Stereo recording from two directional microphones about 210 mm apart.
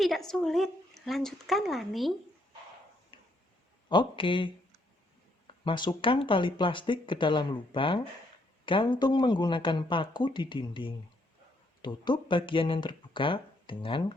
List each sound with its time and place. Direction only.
0.0 s speech: centre (ahead or behind)
3.1 s a sound: 25° left (ahead or behind)
3.8 s speech: 20° left (ahead or behind)
5.6 s speech: 20° left (ahead or behind)